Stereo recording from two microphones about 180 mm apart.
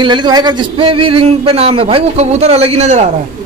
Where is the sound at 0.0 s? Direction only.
25° right (ahead or behind).